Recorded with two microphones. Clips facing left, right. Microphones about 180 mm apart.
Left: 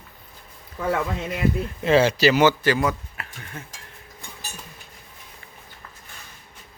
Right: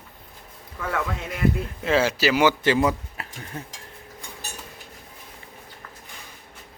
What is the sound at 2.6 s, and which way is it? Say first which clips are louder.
Speech: right 1 dB; 25° right (ahead or behind).